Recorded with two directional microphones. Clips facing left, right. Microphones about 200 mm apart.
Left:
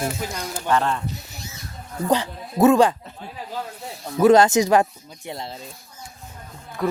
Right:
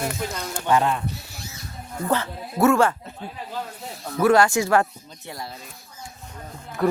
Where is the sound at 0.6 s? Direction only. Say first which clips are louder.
Right 1 dB; 15° right (ahead or behind).